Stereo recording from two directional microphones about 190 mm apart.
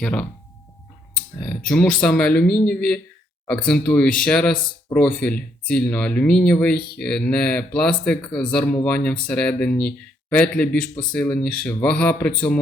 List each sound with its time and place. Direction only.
0.0 s a man's voice: 5° left (ahead or behind)